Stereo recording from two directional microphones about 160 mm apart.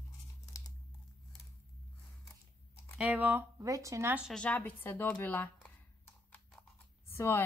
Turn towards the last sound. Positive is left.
turn(degrees=15)  # may be behind; listen again after turning